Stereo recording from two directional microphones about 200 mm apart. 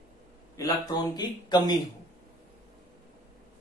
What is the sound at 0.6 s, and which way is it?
Speech, 20° left (ahead or behind).